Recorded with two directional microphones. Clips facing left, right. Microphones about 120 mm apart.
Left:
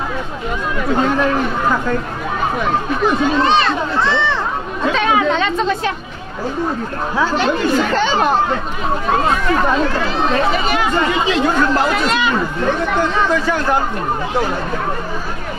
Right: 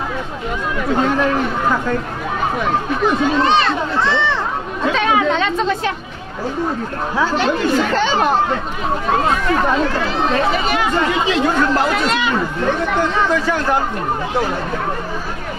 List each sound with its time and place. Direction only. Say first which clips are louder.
0.8 s speech: left 1 dB; 25° left (ahead or behind)
4.8 s chatter: left 1 dB; 20° left (ahead or behind)
7.2 s speech: left 1 dB; 20° left (ahead or behind)